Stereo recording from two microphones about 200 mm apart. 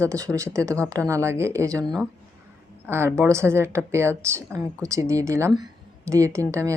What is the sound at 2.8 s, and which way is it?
Speech, 10° right (ahead or behind).